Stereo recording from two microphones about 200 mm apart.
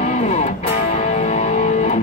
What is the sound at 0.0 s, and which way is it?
Music, 35° left (ahead or behind).